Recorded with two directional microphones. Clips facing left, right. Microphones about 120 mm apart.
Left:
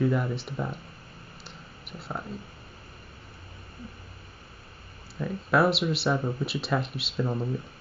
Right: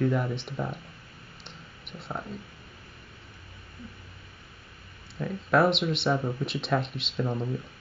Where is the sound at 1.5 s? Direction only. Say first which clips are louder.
Even; 5° left (ahead or behind).